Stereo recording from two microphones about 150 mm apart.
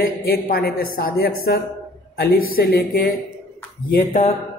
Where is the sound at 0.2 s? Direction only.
90° left.